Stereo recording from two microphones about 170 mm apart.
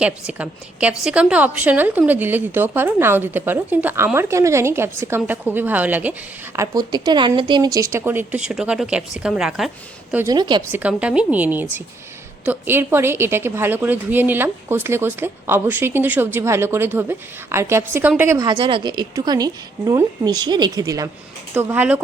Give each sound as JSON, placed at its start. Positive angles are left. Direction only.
{"t": 0.0, "sound": "a woman's voice", "side_deg": -5}
{"t": 6.6, "sound": "a woman's voice", "side_deg": -25}
{"t": 10.2, "sound": "a woman's voice", "side_deg": -25}
{"t": 10.7, "sound": "a woman's voice", "side_deg": -10}